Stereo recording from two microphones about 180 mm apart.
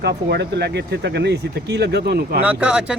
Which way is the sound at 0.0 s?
65° right (ahead or behind).